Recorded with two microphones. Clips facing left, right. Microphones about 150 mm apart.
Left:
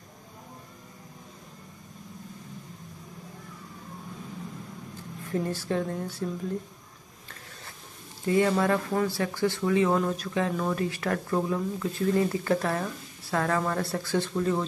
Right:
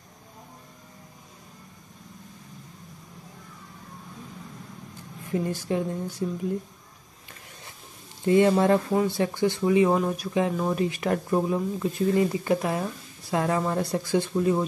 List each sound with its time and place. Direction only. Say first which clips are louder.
5.2 s speech: right 2 dB; 15° right (ahead or behind)
8.3 s speech: right 4 dB; 25° right (ahead or behind)